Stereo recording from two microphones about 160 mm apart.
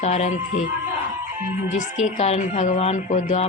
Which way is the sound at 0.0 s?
45° left (ahead or behind).